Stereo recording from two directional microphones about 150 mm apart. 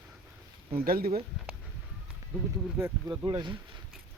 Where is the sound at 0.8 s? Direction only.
85° right.